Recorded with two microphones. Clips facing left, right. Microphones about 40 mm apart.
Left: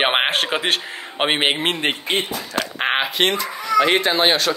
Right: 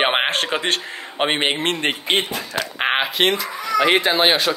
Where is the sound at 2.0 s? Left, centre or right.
Right.